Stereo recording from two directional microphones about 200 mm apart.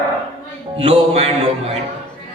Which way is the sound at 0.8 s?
30° right (ahead or behind).